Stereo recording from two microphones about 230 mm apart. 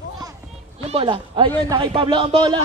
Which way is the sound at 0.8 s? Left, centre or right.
Right.